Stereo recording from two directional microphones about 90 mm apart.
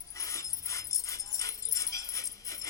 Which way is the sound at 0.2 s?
35° left (ahead or behind).